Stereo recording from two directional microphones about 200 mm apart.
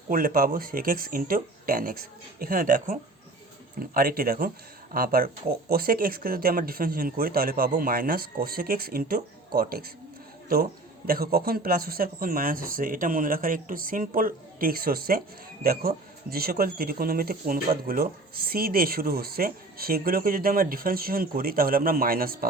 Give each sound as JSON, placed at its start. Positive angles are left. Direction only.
{"t": 0.1, "sound": "speech", "side_deg": -45}